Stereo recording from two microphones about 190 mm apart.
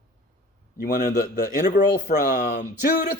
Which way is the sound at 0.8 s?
50° left (ahead or behind).